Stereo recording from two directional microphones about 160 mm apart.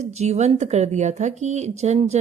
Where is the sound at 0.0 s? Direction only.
45° right (ahead or behind).